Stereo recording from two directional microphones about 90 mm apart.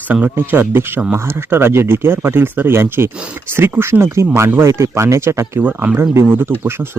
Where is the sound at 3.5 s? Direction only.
25° right (ahead or behind).